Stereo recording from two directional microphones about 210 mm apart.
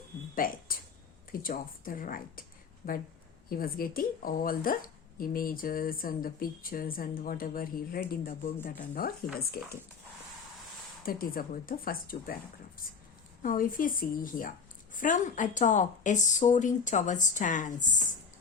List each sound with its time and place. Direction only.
0.3 s speech: 40° left (ahead or behind)
3.5 s a woman's voice: 45° left (ahead or behind)
11.0 s a woman's voice: 45° left (ahead or behind)
13.4 s speech: 40° left (ahead or behind)